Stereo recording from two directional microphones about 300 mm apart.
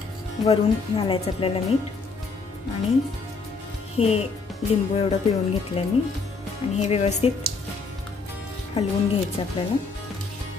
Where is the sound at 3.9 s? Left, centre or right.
Centre.